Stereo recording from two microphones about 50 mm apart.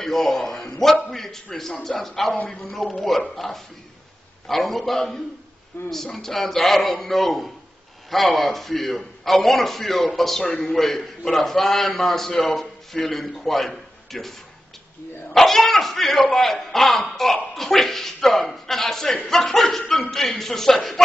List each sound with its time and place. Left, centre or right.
0.0 s a man's voice: centre
5.7 s speech: left
6.1 s a man's voice: centre
10.4 s a man's voice: left
10.7 s a man's voice: centre
15.3 s a man's voice: centre